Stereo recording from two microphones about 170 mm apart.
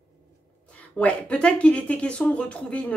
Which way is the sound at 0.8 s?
10° left (ahead or behind).